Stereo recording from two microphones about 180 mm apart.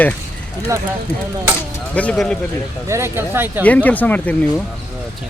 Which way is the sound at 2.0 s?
5° left (ahead or behind).